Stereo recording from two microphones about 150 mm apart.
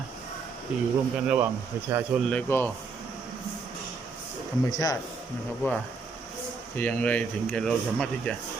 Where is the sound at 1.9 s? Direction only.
15° right (ahead or behind).